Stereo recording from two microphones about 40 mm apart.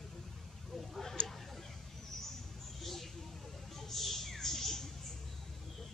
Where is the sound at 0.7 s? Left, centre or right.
Centre.